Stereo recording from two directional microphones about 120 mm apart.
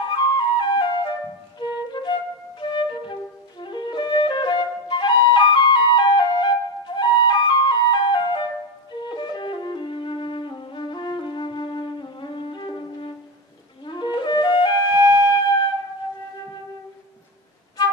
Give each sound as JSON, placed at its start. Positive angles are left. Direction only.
{"t": 0.1, "sound": "flute", "side_deg": 40}
{"t": 15.0, "sound": "music", "side_deg": -20}